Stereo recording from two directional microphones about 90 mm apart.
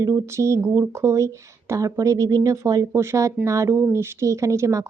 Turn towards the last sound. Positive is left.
turn(degrees=-35)  # may be behind; listen again after turning